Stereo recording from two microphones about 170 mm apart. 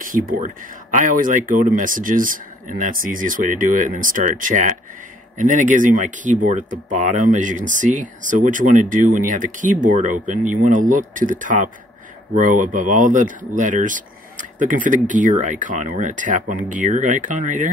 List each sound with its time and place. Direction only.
0.0 s speech: 50° right (ahead or behind)